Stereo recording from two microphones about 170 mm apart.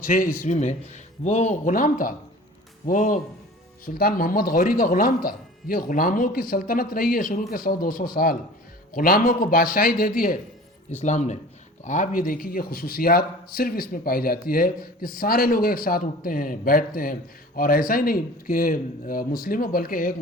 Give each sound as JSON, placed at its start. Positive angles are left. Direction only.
{"t": 0.0, "sound": "a man's voice", "side_deg": 55}
{"t": 11.0, "sound": "a man's voice", "side_deg": 40}